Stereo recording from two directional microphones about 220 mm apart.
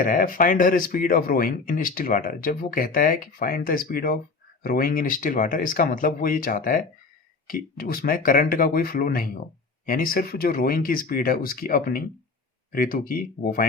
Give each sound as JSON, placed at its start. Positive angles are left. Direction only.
{"t": 0.0, "sound": "speech", "side_deg": 40}